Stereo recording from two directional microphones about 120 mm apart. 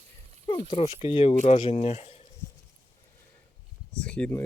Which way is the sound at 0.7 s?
50° left (ahead or behind).